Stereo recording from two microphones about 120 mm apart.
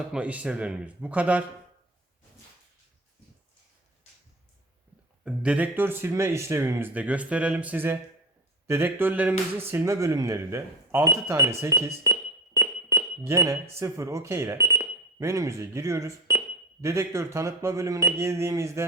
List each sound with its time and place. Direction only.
0.1 s speech: 10° right (ahead or behind)
5.2 s speech: 10° right (ahead or behind); by 18.9 s 25° right (ahead or behind)